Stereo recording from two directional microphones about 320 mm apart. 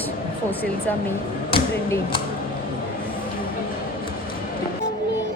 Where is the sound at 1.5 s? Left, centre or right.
Centre.